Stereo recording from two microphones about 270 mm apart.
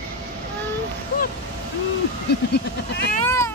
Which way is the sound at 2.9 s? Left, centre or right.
Left.